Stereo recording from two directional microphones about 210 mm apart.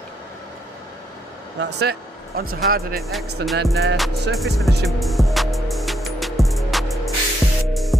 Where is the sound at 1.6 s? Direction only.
55° right (ahead or behind).